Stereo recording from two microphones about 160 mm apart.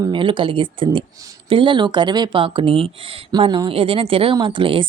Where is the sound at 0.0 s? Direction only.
30° right (ahead or behind).